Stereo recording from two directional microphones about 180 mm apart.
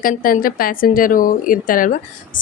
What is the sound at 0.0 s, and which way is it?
A woman's voice, 50° left (ahead or behind).